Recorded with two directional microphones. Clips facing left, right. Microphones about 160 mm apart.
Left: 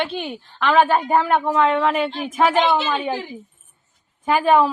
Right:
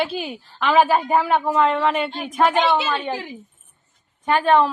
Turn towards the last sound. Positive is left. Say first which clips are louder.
# left 1 dB
turn(degrees=5)  # may be behind; listen again after turning